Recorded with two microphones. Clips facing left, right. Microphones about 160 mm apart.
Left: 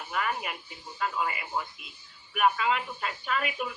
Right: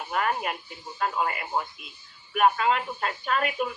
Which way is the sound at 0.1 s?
30° right (ahead or behind).